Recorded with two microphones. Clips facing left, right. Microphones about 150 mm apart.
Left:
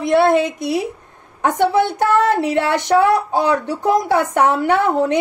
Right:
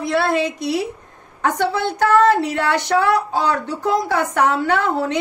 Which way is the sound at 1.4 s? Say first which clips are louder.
Left 4 dB; 20° left (ahead or behind).